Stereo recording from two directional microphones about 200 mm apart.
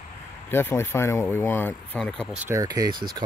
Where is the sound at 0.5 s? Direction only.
10° left (ahead or behind).